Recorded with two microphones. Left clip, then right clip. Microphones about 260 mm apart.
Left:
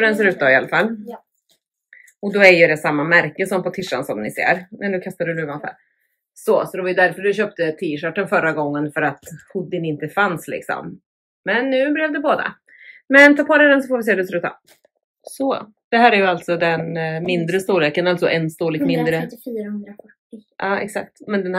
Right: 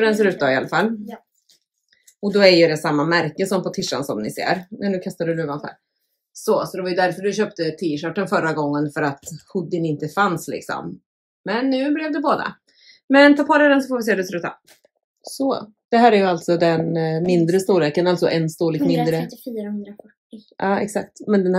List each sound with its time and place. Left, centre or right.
0.4 s speech: centre
0.8 s speech: centre
2.3 s speech: centre
9.1 s speech: centre
9.5 s speech: centre
15.9 s speech: centre
19.2 s speech: centre
20.6 s speech: centre